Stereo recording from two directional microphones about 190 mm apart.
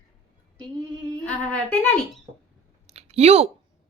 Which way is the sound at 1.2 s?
5° left (ahead or behind).